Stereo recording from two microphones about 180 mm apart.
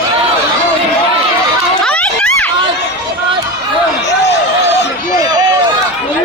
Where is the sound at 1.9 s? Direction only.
5° left (ahead or behind).